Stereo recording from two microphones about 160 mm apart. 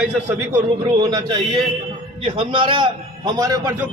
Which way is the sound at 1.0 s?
25° right (ahead or behind).